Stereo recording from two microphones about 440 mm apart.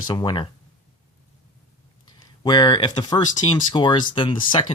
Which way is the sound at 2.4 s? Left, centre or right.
Centre.